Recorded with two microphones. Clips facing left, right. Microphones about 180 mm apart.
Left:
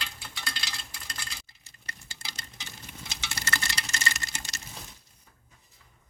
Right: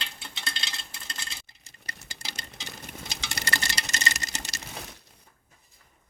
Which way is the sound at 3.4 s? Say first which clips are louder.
Right 1 dB; 35° right (ahead or behind).